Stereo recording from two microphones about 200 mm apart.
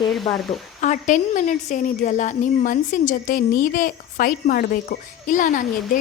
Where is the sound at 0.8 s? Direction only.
40° left (ahead or behind).